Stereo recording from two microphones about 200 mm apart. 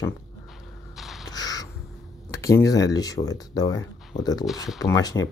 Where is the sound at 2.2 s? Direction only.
15° left (ahead or behind).